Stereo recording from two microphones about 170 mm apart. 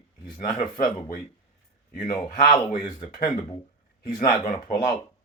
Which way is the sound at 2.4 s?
25° left (ahead or behind).